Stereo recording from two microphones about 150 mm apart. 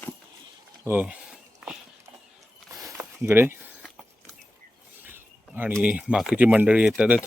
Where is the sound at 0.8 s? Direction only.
10° right (ahead or behind).